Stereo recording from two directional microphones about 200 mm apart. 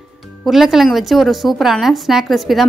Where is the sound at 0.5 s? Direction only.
Centre (ahead or behind).